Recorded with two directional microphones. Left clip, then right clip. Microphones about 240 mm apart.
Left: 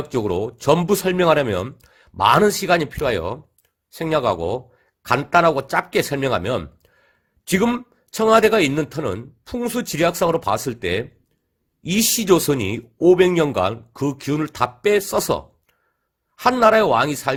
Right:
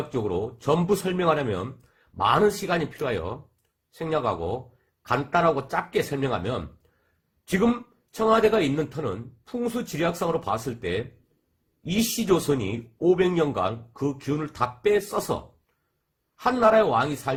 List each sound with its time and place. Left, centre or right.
0.1 s speech: left
8.1 s speech: left
16.4 s speech: left